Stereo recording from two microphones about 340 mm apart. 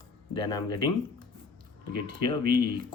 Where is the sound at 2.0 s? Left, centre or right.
Centre.